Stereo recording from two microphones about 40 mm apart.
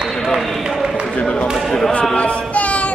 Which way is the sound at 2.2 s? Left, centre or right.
Left.